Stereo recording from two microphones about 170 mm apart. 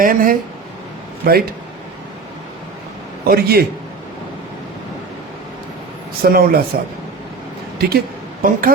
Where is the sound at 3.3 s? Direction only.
65° right (ahead or behind).